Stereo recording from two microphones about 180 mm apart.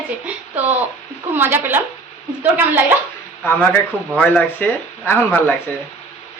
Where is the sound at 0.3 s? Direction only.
10° right (ahead or behind).